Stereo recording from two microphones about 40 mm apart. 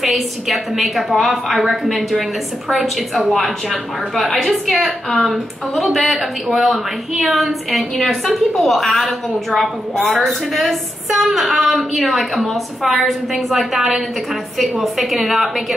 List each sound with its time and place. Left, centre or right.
0.0 s a woman's voice: centre
9.9 s a woman's voice: left
10.2 s a woman's voice: centre